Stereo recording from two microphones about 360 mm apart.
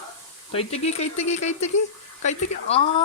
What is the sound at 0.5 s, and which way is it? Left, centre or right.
Speech, centre.